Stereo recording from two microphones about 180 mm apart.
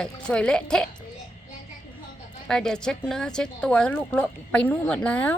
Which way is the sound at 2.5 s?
5° left (ahead or behind).